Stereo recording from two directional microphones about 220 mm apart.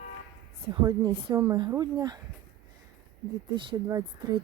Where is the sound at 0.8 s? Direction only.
15° right (ahead or behind).